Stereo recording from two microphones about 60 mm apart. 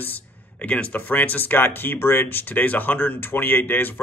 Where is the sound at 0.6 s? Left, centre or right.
Left.